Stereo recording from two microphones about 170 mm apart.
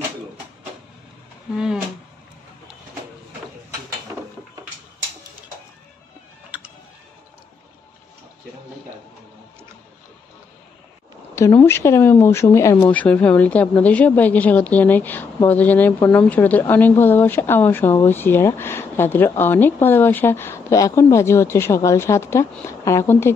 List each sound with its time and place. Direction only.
1.5 s speech: 5° right (ahead or behind)
11.3 s speech: 15° left (ahead or behind)